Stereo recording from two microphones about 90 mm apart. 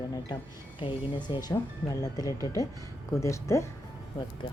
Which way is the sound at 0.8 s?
70° left (ahead or behind).